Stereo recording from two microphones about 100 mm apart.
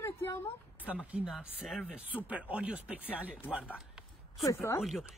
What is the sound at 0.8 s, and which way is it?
Speech, 15° right (ahead or behind).